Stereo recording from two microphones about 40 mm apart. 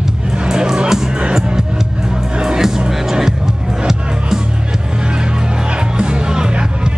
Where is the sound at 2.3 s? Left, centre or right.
Centre.